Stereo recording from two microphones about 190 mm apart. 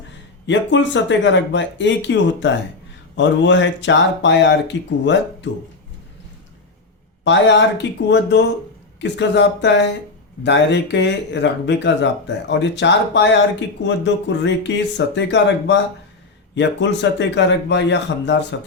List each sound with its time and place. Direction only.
0.4 s speech: 70° left (ahead or behind)
7.3 s speech: 70° left (ahead or behind)